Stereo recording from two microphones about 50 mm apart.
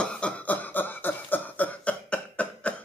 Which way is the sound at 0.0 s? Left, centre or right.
Centre.